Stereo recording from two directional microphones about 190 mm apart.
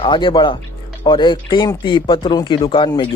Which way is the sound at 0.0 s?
25° left (ahead or behind).